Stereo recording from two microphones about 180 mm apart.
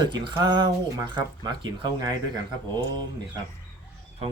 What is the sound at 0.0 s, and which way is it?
Speech, 25° right (ahead or behind).